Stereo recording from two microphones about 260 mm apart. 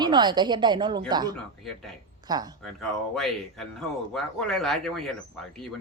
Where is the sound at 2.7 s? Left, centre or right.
Centre.